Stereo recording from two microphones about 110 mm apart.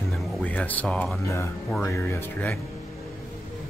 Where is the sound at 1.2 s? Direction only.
25° left (ahead or behind).